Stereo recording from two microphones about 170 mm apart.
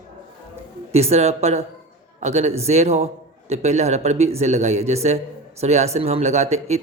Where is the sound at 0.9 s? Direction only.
40° right (ahead or behind).